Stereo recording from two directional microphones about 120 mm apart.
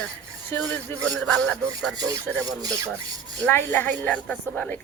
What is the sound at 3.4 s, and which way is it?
Speech, 15° left (ahead or behind).